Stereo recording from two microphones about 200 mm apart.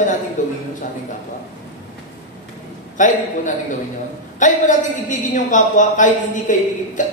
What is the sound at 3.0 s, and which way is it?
Speech, 40° left (ahead or behind).